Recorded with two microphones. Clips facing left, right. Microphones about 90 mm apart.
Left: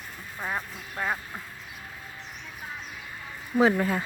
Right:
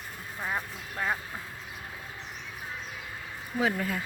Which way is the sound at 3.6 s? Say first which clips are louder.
Left 6 dB; 35° left (ahead or behind).